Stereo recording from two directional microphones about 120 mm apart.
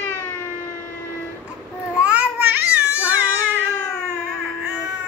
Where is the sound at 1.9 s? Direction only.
10° right (ahead or behind).